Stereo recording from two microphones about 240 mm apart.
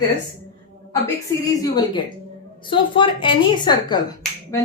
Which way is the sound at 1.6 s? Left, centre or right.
Centre.